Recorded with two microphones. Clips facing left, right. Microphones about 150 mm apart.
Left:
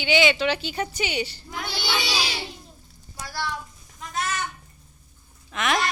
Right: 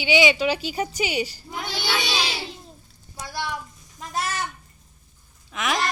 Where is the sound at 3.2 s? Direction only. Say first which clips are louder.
Even; 20° right (ahead or behind).